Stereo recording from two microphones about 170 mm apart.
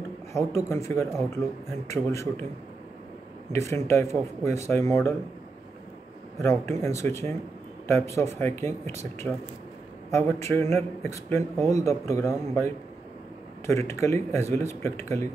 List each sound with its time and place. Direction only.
0.3 s speech: 15° left (ahead or behind)
3.5 s speech: 15° left (ahead or behind)
6.4 s speech: 15° left (ahead or behind)